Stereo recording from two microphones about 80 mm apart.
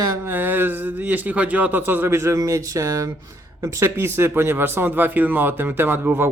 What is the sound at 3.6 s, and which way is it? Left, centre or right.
Speech, right.